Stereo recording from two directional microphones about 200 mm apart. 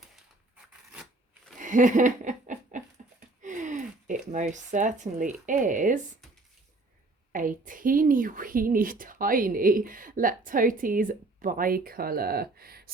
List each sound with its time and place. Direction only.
0.5 s a sound: 5° right (ahead or behind)
1.5 s laughter: 40° right (ahead or behind)
3.4 s speech: 40° right (ahead or behind)
7.3 s a woman's voice: 40° right (ahead or behind)